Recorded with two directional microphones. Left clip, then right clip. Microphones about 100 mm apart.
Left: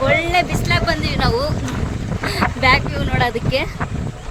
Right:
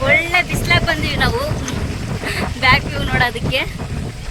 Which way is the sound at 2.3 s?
25° left (ahead or behind).